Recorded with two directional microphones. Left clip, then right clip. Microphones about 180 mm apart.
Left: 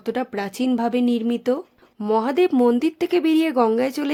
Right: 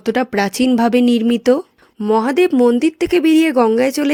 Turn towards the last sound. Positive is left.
turn(degrees=-20)  # may be behind; listen again after turning